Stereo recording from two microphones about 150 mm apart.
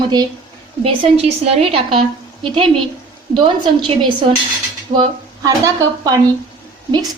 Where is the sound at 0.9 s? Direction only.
40° right (ahead or behind).